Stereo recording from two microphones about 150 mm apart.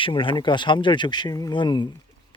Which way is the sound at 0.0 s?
35° left (ahead or behind).